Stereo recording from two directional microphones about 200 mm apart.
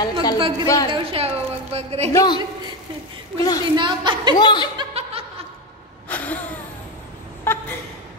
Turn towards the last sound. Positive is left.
turn(degrees=10)  # may be behind; listen again after turning